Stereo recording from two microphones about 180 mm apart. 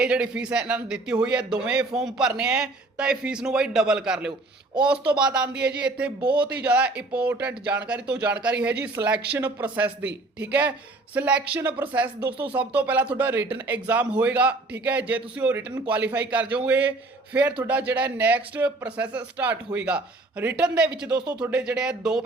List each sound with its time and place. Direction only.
0.0 s a man's voice: 5° right (ahead or behind)
6.2 s speech: 25° right (ahead or behind)
6.5 s a man's voice: 5° right (ahead or behind)